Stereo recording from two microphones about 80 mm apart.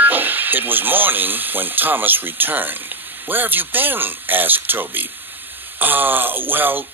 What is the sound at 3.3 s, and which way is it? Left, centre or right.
Speech, right.